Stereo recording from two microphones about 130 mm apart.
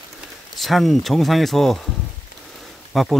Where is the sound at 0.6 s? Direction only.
Centre (ahead or behind).